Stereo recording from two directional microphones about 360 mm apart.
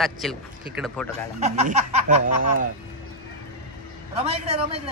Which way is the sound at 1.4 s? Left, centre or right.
Centre.